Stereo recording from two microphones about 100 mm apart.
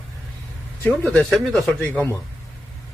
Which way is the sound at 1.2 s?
5° left (ahead or behind).